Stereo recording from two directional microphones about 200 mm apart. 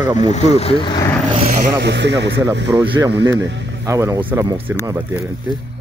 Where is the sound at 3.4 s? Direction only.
65° right (ahead or behind).